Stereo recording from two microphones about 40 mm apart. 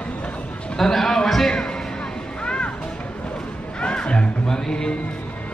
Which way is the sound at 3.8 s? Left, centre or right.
Left.